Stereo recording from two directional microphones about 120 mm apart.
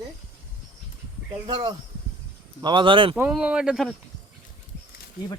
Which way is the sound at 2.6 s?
40° right (ahead or behind).